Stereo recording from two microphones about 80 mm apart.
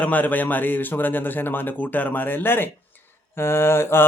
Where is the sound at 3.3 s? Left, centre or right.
Left.